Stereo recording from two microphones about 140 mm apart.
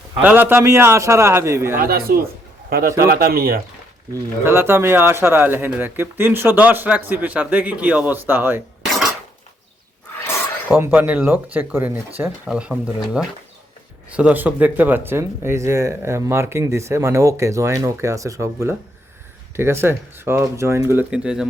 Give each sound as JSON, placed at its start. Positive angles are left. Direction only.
{"t": 0.2, "sound": "speech", "side_deg": -10}
{"t": 1.8, "sound": "speech", "side_deg": -90}
{"t": 4.1, "sound": "speech", "side_deg": -20}
{"t": 10.7, "sound": "speech", "side_deg": -15}